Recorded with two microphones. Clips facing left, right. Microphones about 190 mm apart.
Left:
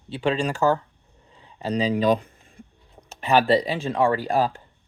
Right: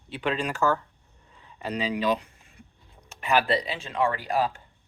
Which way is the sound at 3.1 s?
30° left (ahead or behind).